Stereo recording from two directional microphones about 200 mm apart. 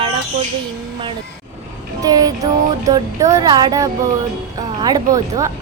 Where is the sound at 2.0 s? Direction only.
20° right (ahead or behind).